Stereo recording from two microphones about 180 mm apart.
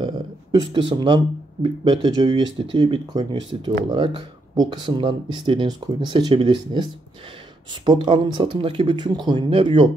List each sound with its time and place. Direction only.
0.0 s speech: 25° right (ahead or behind)